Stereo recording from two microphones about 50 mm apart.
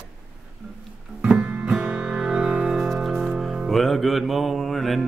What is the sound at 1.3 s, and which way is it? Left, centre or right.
Music, centre.